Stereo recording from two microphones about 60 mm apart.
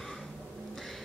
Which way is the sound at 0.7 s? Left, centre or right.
Centre.